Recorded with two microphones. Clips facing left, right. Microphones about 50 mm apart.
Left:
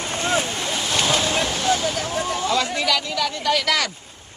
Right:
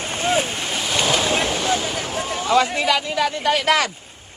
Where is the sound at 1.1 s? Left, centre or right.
Right.